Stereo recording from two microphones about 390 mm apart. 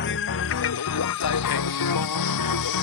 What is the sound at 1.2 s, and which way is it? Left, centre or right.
Music, left.